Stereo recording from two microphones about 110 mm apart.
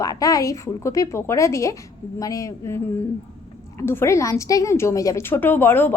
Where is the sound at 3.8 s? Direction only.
20° left (ahead or behind).